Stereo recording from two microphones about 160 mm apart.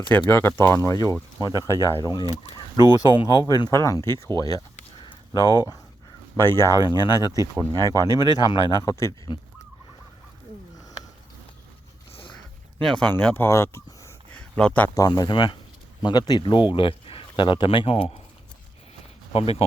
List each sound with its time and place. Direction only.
0.3 s speech: 15° left (ahead or behind)
1.4 s speech: 20° right (ahead or behind)
1.6 s speech: 20° left (ahead or behind)
4.4 s a sound: 25° left (ahead or behind)
6.4 s speech: 20° left (ahead or behind)
12.8 s speech: 5° left (ahead or behind)
14.9 s speech: 25° left (ahead or behind)
19.3 s speech: 35° left (ahead or behind)